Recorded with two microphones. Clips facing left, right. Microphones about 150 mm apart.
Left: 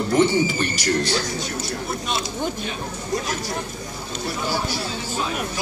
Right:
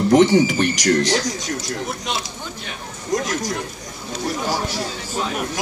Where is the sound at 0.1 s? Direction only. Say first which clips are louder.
Right 5 dB; 75° right (ahead or behind).